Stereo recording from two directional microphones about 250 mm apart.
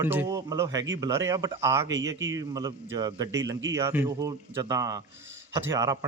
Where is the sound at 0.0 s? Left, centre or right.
Centre.